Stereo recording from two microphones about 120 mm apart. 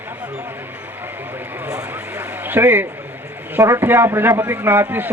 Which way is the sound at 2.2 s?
15° right (ahead or behind).